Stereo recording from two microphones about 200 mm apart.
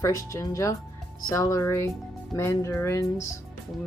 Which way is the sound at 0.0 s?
15° left (ahead or behind).